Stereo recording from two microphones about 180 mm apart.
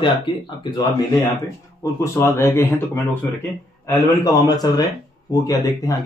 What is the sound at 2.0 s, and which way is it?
Speech, 15° left (ahead or behind).